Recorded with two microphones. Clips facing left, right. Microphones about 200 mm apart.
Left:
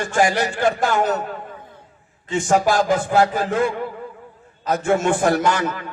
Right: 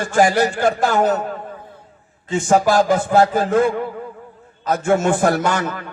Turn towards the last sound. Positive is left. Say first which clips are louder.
# even
turn(degrees=-45)  # may be behind; listen again after turning